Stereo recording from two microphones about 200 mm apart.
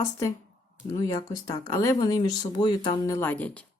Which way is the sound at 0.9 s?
20° left (ahead or behind).